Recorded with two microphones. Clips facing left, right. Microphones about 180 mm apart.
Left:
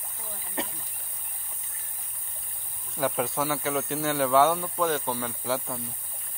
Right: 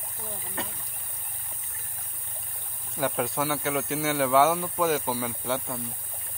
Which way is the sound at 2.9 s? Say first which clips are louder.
Even; centre (ahead or behind).